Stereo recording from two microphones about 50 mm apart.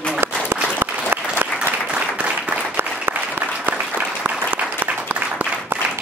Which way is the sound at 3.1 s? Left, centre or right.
Right.